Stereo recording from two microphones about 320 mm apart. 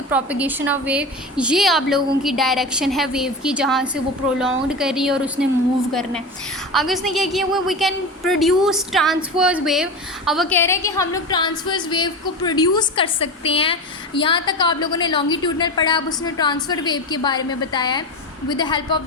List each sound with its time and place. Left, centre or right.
0.1 s a woman's voice: centre